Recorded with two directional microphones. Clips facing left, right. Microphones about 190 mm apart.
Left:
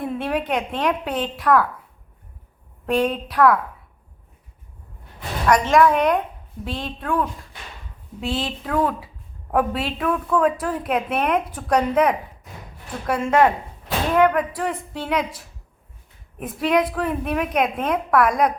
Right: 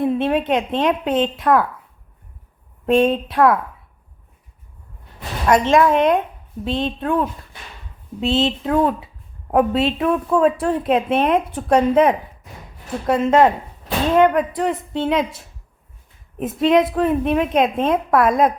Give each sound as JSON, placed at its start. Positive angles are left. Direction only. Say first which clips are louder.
{"t": 0.0, "sound": "a woman's voice", "louder": "right 6 dB", "side_deg": -25}
{"t": 2.8, "sound": "a woman's voice", "louder": "right 5 dB", "side_deg": -25}
{"t": 5.5, "sound": "a woman's voice", "louder": "right 2 dB", "side_deg": -25}